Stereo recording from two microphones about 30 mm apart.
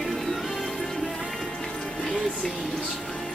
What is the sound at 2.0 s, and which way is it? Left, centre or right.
Music, left.